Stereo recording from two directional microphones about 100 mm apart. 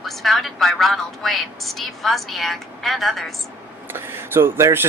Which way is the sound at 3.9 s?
20° right (ahead or behind).